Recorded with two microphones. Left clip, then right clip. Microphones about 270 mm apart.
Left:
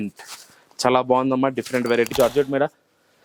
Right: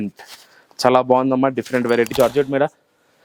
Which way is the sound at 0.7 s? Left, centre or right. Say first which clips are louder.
Right 4 dB; right.